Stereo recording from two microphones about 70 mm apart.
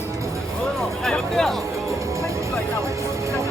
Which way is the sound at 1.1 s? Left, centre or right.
Centre.